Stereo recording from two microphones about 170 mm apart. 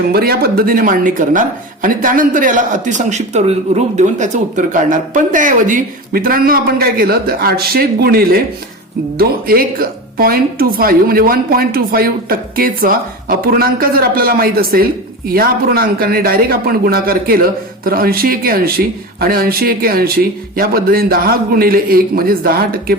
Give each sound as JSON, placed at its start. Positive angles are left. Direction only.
{"t": 0.1, "sound": "speech", "side_deg": -65}